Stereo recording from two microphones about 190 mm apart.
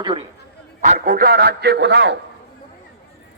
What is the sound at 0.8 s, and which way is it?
A man's voice, 50° right (ahead or behind).